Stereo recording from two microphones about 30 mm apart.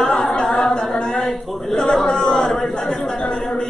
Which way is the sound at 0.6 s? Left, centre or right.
Left.